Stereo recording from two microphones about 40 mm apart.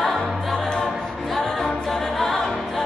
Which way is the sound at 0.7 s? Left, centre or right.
Centre.